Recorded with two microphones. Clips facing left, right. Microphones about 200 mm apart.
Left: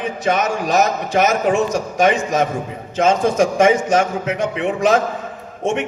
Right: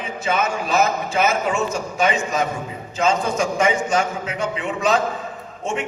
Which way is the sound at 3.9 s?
50° left (ahead or behind).